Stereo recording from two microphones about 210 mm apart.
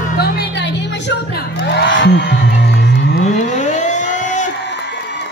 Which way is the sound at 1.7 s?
60° left (ahead or behind).